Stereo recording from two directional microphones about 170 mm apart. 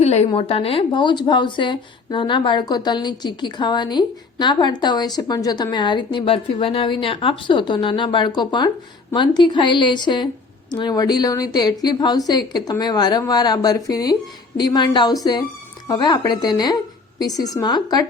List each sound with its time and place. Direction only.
0.0 s a woman's voice: 40° left (ahead or behind)